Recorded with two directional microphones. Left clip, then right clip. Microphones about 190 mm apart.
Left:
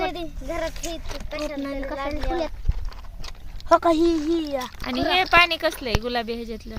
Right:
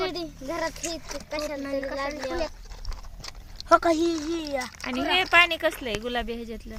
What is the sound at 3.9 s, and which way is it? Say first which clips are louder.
Speech: left 5 dB; 25° left (ahead or behind).